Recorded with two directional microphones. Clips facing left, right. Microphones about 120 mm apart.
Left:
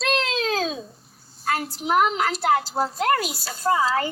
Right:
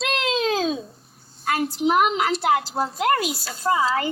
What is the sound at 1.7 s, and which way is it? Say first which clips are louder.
Speech: right 1 dB; 15° right (ahead or behind).